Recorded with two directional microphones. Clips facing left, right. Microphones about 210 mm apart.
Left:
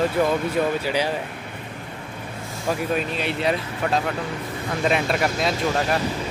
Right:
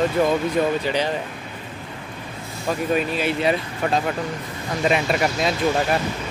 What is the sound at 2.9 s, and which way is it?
Speech, 5° right (ahead or behind).